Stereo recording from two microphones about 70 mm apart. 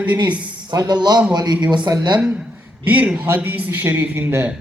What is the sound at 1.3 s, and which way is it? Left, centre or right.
Speech, right.